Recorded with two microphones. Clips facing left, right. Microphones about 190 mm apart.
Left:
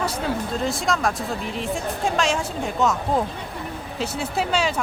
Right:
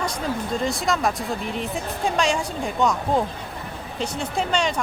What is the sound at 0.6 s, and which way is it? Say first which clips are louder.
Speech: right 1 dB; centre (ahead or behind).